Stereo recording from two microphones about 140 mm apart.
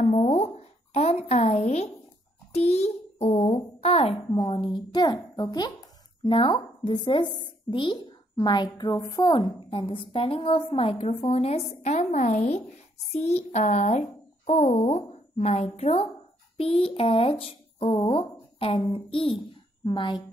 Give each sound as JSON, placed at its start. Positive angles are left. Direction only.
{"t": 0.0, "sound": "a sound", "side_deg": 50}
{"t": 4.5, "sound": "a woman's voice", "side_deg": 35}
{"t": 9.7, "sound": "a woman's voice", "side_deg": 40}